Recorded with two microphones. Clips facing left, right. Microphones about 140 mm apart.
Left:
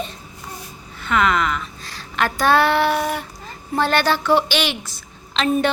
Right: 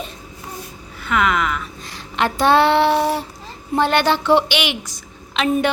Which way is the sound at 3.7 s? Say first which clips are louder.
Right 2 dB; 20° right (ahead or behind).